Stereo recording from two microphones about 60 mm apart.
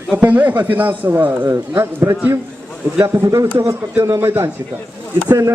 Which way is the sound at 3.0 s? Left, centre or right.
Right.